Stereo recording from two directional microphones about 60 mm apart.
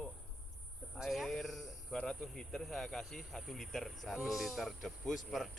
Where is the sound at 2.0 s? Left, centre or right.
Centre.